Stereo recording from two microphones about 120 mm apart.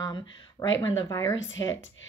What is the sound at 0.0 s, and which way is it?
Speech, 35° left (ahead or behind).